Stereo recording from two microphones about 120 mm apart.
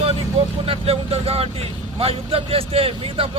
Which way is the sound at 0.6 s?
50° right (ahead or behind).